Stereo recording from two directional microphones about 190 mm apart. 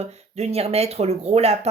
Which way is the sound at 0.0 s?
35° right (ahead or behind).